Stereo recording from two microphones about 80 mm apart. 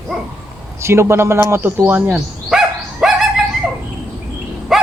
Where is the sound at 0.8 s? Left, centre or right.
Right.